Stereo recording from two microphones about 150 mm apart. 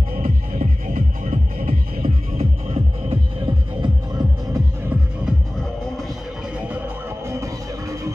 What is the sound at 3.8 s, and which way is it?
Music, 25° right (ahead or behind).